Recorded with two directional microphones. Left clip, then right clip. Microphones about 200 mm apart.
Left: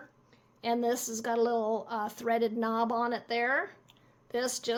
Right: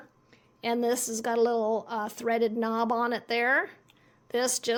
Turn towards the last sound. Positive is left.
turn(degrees=-35)  # may be behind; listen again after turning